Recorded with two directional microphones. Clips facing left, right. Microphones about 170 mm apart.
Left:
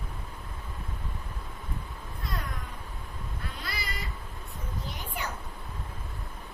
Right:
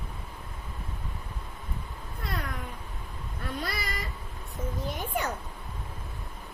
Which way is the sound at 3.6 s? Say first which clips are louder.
Right 1 dB; 50° right (ahead or behind).